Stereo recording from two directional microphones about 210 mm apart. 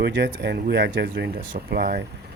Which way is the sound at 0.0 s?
50° right (ahead or behind).